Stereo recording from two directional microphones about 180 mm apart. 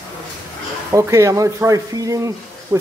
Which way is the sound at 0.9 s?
15° right (ahead or behind).